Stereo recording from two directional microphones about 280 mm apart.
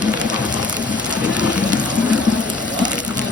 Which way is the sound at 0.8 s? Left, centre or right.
Centre.